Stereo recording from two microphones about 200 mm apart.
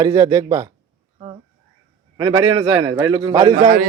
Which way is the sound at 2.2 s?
25° right (ahead or behind).